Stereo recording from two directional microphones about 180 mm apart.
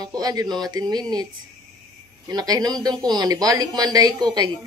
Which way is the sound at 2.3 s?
20° right (ahead or behind).